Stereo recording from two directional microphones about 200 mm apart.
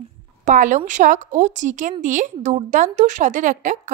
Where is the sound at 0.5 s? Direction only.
40° right (ahead or behind).